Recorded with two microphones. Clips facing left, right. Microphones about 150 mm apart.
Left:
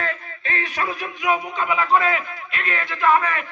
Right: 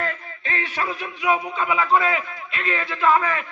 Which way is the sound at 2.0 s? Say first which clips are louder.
Left 1 dB; 30° right (ahead or behind).